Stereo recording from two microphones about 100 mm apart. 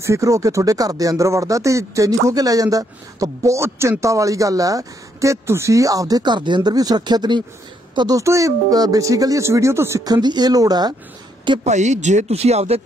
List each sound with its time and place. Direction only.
0.0 s a woman's voice: 30° right (ahead or behind); by 8.2 s 50° right (ahead or behind)
8.2 s speech: 30° right (ahead or behind)
11.5 s a woman's voice: 55° right (ahead or behind)
12.3 s speech: 90° right